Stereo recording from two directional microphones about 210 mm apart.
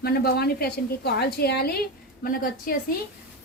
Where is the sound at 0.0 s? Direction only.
45° left (ahead or behind).